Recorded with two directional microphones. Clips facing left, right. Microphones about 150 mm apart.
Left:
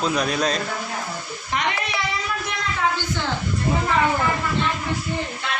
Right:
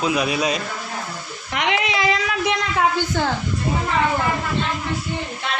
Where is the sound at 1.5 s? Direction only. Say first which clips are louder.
Right 3 dB; 80° right.